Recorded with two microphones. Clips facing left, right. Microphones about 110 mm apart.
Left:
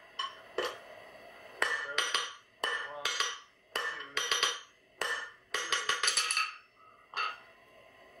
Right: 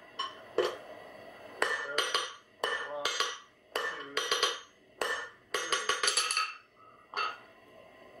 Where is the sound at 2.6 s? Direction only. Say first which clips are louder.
Right 3 dB; 5° right (ahead or behind).